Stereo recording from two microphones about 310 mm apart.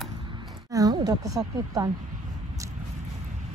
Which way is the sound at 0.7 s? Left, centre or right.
Centre.